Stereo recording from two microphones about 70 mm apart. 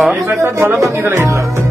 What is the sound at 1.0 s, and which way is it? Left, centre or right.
Speech, right.